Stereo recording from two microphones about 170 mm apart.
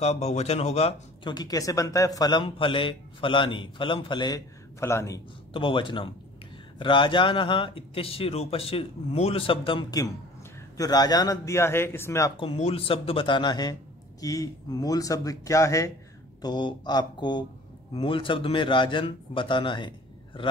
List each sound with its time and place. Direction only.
0.0 s speech: 40° left (ahead or behind)
1.3 s a man's voice: 20° left (ahead or behind)
5.5 s a man's voice: 30° left (ahead or behind); by 12.3 s 15° left (ahead or behind)
12.4 s a man's voice: 35° left (ahead or behind)